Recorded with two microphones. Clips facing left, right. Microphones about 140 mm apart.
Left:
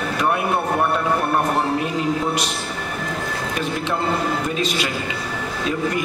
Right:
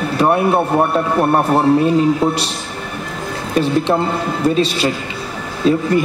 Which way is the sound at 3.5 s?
30° right (ahead or behind).